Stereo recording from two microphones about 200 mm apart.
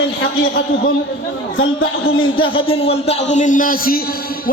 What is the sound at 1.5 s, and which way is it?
Speech, 90° left.